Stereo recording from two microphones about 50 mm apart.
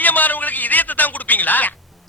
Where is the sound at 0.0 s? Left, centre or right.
Left.